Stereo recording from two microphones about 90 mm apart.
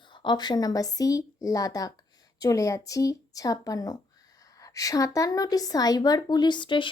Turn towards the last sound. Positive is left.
turn(degrees=65)  # may be behind; listen again after turning